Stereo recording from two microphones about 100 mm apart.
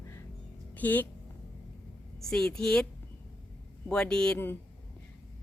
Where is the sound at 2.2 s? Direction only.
5° left (ahead or behind).